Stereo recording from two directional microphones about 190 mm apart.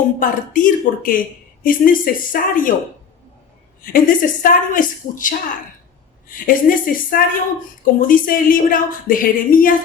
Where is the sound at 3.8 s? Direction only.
45° left (ahead or behind).